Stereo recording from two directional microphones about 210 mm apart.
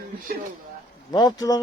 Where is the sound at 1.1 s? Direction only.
20° left (ahead or behind).